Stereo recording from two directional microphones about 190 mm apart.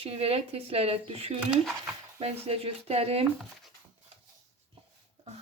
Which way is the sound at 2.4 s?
30° right (ahead or behind).